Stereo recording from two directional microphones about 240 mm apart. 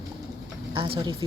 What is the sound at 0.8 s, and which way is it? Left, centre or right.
Speech, right.